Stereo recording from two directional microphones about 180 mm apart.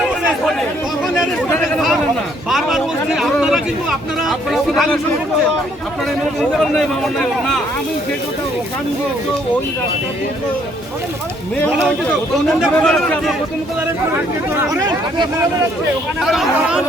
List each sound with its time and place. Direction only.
1.5 s chatter: 5° left (ahead or behind)
2.5 s a sound: centre (ahead or behind)
6.6 s a man's voice: 5° left (ahead or behind)
12.5 s a man's voice: centre (ahead or behind)
13.8 s speech: 10° right (ahead or behind)
16.2 s a man's voice: centre (ahead or behind)